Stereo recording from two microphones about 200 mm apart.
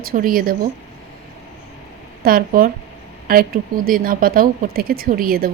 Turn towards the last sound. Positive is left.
turn(degrees=-45)  # may be behind; listen again after turning